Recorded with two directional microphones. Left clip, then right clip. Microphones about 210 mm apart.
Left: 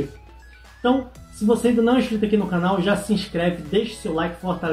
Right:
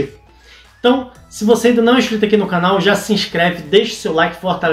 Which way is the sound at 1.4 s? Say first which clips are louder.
Right 7 dB; 10° right (ahead or behind).